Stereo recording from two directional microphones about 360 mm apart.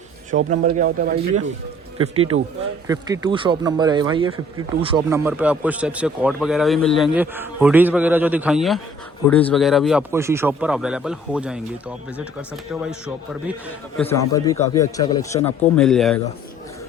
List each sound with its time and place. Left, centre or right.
0.3 s speech: right
2.1 s a man's voice: right
2.8 s speech: centre
14.0 s a man's voice: centre